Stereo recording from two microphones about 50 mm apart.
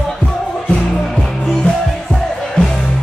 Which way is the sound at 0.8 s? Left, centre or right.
Centre.